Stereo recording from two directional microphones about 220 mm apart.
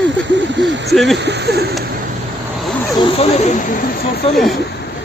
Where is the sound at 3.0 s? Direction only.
30° left (ahead or behind).